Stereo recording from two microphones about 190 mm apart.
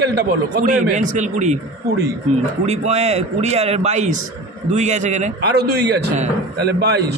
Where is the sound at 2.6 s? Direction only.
35° right (ahead or behind).